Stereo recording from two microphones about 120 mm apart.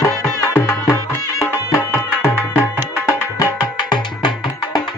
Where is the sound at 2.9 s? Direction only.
25° left (ahead or behind).